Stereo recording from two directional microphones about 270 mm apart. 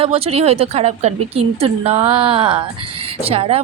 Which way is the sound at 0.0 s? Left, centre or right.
Right.